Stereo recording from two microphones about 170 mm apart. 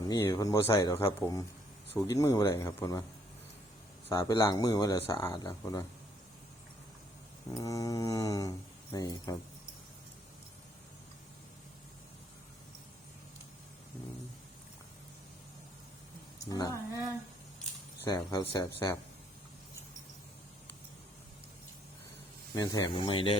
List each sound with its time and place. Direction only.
0.1 s speech: 20° left (ahead or behind)
4.1 s speech: 20° left (ahead or behind)
7.5 s speech: 20° left (ahead or behind)
16.5 s speech: 20° left (ahead or behind)
18.1 s speech: 25° left (ahead or behind)
22.5 s speech: 20° left (ahead or behind)